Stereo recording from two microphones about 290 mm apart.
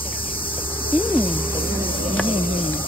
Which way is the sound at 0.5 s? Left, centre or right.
Centre.